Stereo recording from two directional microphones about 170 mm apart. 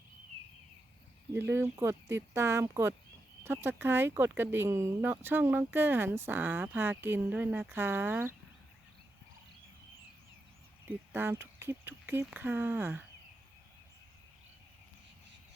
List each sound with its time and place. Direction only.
1.3 s speech: 15° right (ahead or behind)
10.8 s speech: 10° right (ahead or behind)